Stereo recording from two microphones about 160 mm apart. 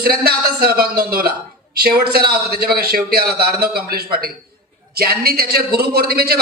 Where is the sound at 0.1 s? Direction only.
75° right (ahead or behind).